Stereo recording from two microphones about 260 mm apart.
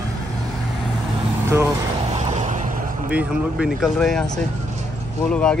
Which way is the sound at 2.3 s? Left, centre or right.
Right.